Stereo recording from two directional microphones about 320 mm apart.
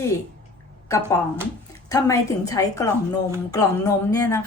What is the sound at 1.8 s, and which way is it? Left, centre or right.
A woman's voice, centre.